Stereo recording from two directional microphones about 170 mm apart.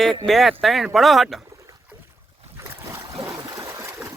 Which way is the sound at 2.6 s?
15° right (ahead or behind).